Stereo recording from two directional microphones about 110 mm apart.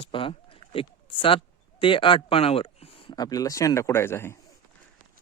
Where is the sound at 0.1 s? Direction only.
50° left (ahead or behind).